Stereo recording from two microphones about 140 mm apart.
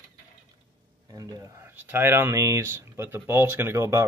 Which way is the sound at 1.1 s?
25° right (ahead or behind).